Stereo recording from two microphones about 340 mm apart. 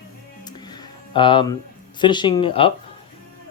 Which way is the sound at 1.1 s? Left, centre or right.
Centre.